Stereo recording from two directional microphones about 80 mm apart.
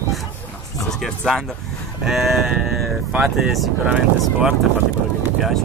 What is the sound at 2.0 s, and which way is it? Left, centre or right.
Speech, centre.